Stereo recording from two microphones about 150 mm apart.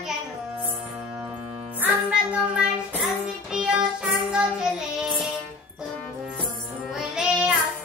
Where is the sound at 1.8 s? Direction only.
5° right (ahead or behind).